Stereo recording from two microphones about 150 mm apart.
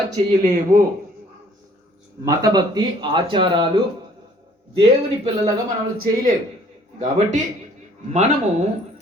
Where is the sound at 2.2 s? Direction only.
25° right (ahead or behind).